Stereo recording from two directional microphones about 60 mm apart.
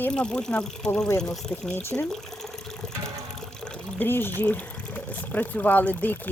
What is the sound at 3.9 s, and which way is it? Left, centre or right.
Speech, left.